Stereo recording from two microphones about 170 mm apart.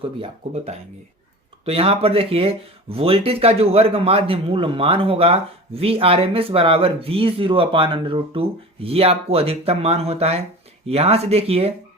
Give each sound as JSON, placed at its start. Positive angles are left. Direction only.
{"t": 0.0, "sound": "speech", "side_deg": -35}